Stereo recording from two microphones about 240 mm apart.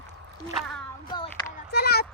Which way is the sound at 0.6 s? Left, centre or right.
Centre.